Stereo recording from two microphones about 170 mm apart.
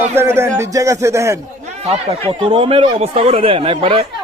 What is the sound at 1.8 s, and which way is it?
Speech, 40° right (ahead or behind).